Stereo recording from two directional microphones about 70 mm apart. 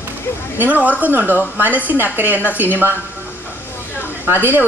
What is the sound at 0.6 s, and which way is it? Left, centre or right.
A woman's voice, right.